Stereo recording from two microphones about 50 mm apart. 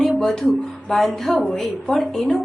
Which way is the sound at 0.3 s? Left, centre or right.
Centre.